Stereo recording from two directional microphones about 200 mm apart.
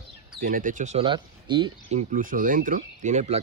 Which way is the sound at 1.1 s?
25° right (ahead or behind).